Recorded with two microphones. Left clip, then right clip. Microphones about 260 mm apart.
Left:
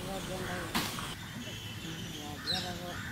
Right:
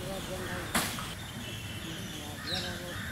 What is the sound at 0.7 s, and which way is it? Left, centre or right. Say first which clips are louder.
Vehicle: right 3 dB; centre.